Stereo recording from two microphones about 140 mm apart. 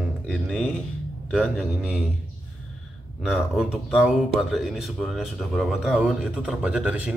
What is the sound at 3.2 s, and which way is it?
Speech, 5° right (ahead or behind).